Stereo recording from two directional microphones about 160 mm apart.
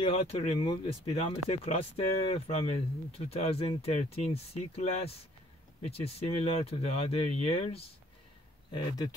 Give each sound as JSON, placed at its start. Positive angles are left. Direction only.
{"t": 0.0, "sound": "speech", "side_deg": 40}
{"t": 8.7, "sound": "speech", "side_deg": 25}